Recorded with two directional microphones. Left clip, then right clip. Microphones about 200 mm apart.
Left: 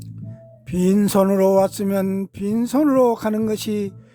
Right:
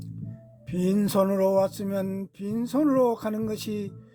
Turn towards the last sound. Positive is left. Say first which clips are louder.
# left 9 dB
turn(degrees=20)  # may be behind; listen again after turning